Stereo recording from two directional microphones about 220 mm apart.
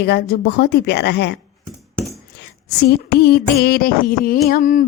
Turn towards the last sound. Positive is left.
turn(degrees=35)  # may be behind; listen again after turning